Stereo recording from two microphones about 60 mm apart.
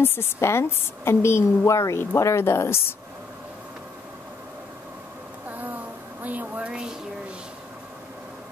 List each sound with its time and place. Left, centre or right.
0.0 s a woman's voice: left
5.5 s a sound: right
6.2 s speech: right
6.7 s speech: centre